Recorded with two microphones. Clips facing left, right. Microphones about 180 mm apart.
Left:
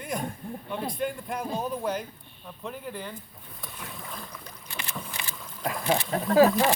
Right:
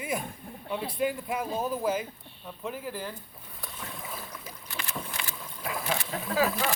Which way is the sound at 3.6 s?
Centre (ahead or behind).